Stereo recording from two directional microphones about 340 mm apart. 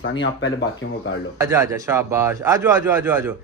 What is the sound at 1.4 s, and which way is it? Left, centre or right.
A man's voice, centre.